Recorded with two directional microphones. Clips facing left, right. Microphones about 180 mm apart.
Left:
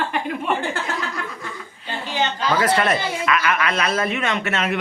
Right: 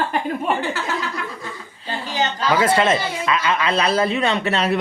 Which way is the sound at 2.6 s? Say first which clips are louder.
Right 2 dB; 25° right (ahead or behind).